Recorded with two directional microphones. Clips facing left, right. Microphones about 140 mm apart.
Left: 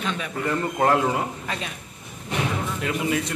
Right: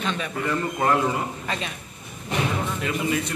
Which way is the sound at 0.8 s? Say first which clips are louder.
Left 2 dB; 65° left (ahead or behind).